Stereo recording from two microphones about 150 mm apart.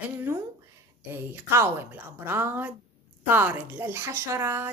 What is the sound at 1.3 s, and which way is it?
A woman's voice, 15° right (ahead or behind).